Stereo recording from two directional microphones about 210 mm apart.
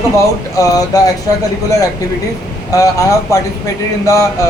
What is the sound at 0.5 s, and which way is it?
Speech, 15° left (ahead or behind).